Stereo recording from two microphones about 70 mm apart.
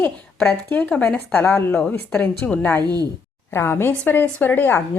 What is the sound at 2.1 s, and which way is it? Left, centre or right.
Speech, centre.